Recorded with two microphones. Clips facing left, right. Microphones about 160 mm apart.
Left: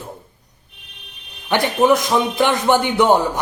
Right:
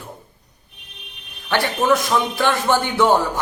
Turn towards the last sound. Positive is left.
turn(degrees=20)  # may be behind; listen again after turning